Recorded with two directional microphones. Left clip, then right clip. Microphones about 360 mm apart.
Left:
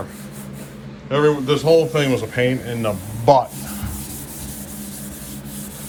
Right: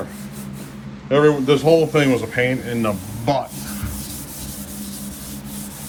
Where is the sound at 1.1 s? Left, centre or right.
Centre.